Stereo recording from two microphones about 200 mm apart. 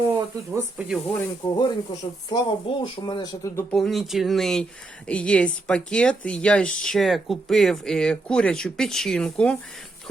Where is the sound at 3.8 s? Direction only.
Centre (ahead or behind).